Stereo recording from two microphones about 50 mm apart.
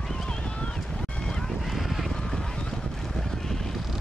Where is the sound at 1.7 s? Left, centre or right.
Centre.